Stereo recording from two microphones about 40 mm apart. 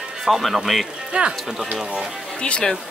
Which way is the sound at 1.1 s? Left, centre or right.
Right.